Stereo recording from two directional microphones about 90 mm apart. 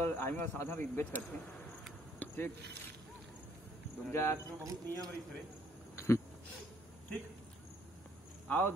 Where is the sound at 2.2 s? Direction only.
20° left (ahead or behind).